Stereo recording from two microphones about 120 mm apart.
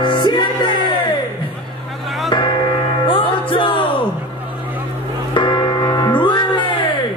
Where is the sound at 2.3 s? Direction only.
40° left (ahead or behind).